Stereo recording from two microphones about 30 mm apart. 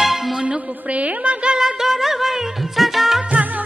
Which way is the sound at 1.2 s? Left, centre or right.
Right.